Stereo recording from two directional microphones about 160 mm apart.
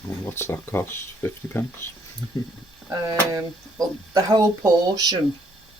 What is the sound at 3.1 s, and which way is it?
Speech, 20° right (ahead or behind).